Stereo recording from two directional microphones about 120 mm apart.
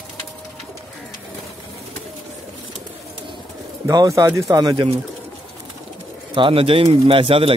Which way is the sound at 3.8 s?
25° right (ahead or behind).